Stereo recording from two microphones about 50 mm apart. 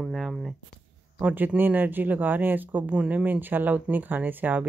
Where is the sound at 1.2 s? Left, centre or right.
Right.